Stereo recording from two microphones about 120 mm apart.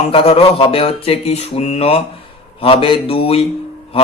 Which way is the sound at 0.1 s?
50° left (ahead or behind).